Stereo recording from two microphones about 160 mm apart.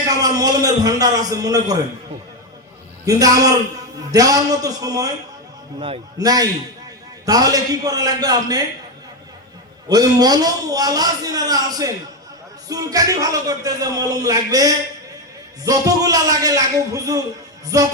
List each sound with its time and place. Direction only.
0.2 s speech: 25° right (ahead or behind)
3.1 s speech: 20° right (ahead or behind)
6.1 s speech: 25° right (ahead or behind)
9.9 s speech: 25° right (ahead or behind)